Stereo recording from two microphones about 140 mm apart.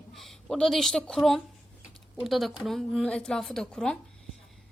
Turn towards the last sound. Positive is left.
turn(degrees=5)  # may be behind; listen again after turning